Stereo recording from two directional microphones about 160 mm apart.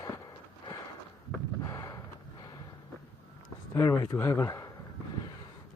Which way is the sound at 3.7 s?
20° left (ahead or behind).